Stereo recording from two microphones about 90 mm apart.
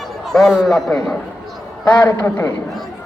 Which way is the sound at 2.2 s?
30° left (ahead or behind).